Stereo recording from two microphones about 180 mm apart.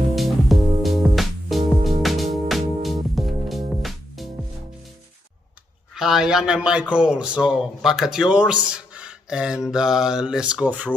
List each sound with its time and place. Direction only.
0.1 s music: centre (ahead or behind)
5.9 s a man's voice: centre (ahead or behind)